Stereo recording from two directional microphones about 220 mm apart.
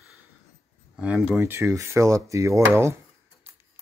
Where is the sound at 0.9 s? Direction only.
5° right (ahead or behind).